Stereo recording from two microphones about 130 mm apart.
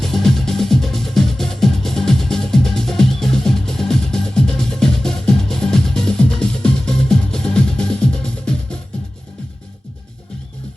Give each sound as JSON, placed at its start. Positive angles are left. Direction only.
{"t": 0.0, "sound": "music", "side_deg": 0}